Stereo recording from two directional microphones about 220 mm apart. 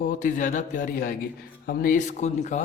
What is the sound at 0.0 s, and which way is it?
A man's voice, 35° left (ahead or behind).